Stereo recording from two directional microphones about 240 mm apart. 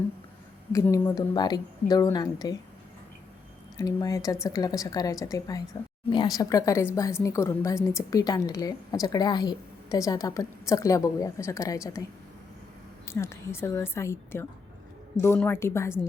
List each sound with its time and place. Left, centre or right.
0.7 s a woman's voice: centre
3.8 s a woman's voice: centre
13.1 s a woman's voice: centre